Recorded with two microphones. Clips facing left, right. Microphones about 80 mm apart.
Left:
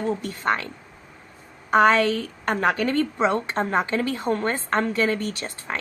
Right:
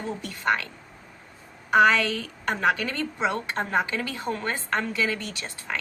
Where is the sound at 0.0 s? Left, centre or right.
Left.